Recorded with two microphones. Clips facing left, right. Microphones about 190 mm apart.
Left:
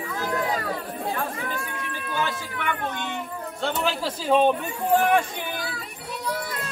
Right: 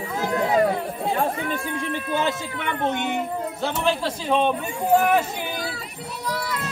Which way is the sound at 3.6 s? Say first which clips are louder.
Right 1 dB; 5° left (ahead or behind).